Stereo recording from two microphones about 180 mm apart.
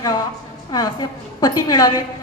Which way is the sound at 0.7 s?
20° left (ahead or behind).